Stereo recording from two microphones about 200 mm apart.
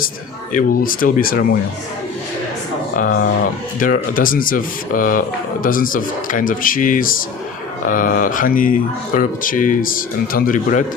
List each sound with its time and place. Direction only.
0.5 s speech: 45° left (ahead or behind)
2.9 s speech: 45° left (ahead or behind)